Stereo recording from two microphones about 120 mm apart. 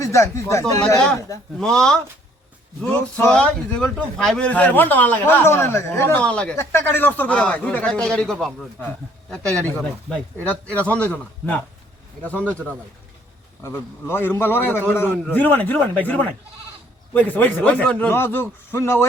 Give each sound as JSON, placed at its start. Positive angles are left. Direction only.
{"t": 0.0, "sound": "a man's voice", "side_deg": 25}
{"t": 1.5, "sound": "speech", "side_deg": 5}
{"t": 2.8, "sound": "a man's voice", "side_deg": 15}
{"t": 6.1, "sound": "a man's voice", "side_deg": 10}
{"t": 6.6, "sound": "a man's voice", "side_deg": 20}
{"t": 9.7, "sound": "a man's voice", "side_deg": 10}